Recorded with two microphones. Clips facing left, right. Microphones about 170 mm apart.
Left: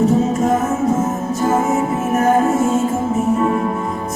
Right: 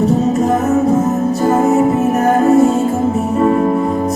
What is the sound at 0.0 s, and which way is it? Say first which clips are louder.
Music: right 2 dB; 35° right (ahead or behind).